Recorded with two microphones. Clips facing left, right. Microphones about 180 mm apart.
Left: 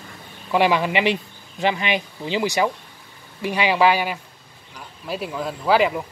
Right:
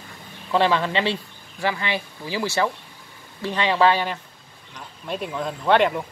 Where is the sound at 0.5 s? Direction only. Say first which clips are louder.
Left 2 dB; 15° left (ahead or behind).